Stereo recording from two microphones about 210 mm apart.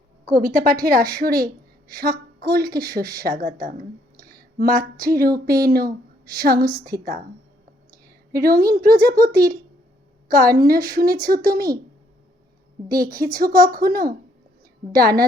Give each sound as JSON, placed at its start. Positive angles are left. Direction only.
{"t": 0.3, "sound": "a woman's voice", "side_deg": -40}
{"t": 8.3, "sound": "a woman's voice", "side_deg": -45}
{"t": 12.9, "sound": "a woman's voice", "side_deg": -45}